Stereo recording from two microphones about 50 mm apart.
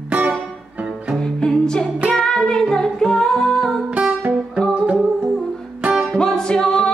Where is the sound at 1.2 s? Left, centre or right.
Centre.